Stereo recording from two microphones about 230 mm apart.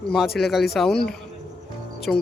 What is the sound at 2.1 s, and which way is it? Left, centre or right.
Speech, centre.